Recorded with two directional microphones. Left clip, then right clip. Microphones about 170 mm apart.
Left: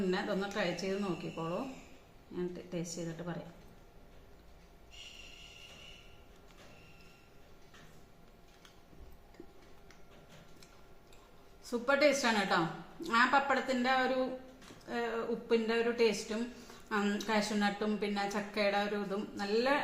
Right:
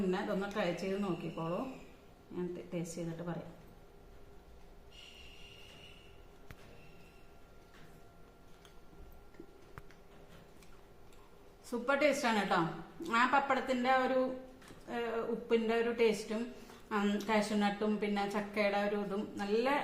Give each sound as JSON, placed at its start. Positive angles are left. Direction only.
{"t": 0.1, "sound": "a woman's voice", "side_deg": 0}
{"t": 11.7, "sound": "a woman's voice", "side_deg": -5}